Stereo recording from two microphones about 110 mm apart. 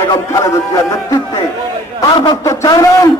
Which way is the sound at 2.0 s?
45° left (ahead or behind).